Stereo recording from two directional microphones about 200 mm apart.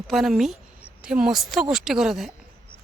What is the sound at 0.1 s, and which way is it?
Speech, centre (ahead or behind).